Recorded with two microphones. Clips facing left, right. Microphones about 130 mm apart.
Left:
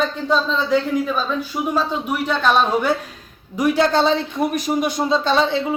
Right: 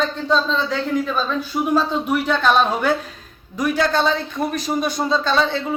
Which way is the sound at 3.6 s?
20° left (ahead or behind).